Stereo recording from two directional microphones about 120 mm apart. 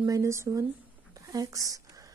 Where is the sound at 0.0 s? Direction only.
25° right (ahead or behind).